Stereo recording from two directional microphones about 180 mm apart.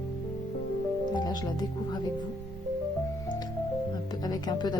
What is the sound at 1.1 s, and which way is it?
Speech, 20° left (ahead or behind).